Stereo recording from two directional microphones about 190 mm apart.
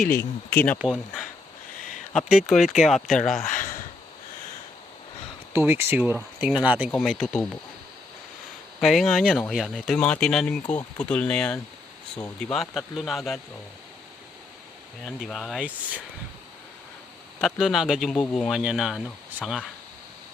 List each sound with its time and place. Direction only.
0.1 s speech: 10° left (ahead or behind)
2.1 s speech: centre (ahead or behind)
3.4 s a sound: 45° left (ahead or behind)
5.5 s speech: 10° right (ahead or behind)
8.8 s speech: centre (ahead or behind)
15.0 s speech: centre (ahead or behind)
17.4 s speech: centre (ahead or behind)